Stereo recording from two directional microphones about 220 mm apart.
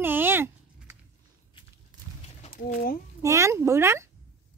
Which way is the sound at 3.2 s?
15° right (ahead or behind).